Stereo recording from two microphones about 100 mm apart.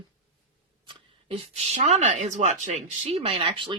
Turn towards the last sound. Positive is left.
turn(degrees=-60)  # may be behind; listen again after turning